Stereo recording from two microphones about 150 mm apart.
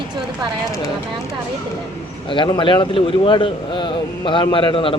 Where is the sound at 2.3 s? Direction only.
30° left (ahead or behind).